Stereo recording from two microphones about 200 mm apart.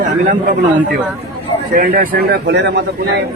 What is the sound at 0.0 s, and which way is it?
A man's voice, 40° right (ahead or behind).